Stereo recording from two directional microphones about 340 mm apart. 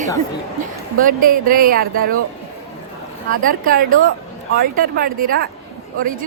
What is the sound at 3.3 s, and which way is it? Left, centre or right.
Speech, right.